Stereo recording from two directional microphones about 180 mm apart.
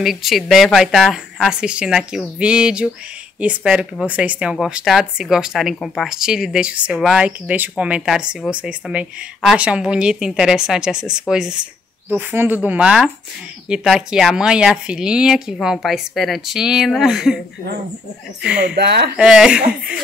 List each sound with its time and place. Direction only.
0.0 s a woman's voice: centre (ahead or behind)
18.8 s speech: 65° right (ahead or behind)
19.1 s speech: 5° right (ahead or behind)